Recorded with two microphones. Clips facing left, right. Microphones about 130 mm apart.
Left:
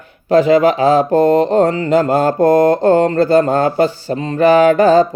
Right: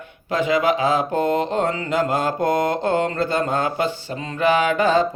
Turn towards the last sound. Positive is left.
turn(degrees=40)  # may be behind; listen again after turning